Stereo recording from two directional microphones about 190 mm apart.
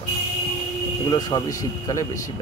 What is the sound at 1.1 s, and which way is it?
Speech, 20° left (ahead or behind).